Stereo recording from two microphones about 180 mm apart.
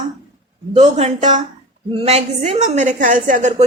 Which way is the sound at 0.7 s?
35° right (ahead or behind).